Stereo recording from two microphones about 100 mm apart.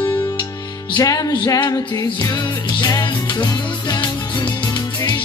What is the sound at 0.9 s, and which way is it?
Music, 40° left (ahead or behind).